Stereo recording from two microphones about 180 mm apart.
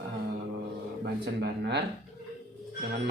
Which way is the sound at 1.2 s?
65° right (ahead or behind).